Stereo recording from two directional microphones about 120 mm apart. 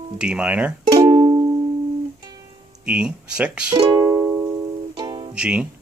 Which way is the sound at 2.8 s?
10° right (ahead or behind).